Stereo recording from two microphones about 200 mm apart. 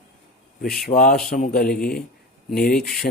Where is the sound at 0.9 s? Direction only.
45° left (ahead or behind).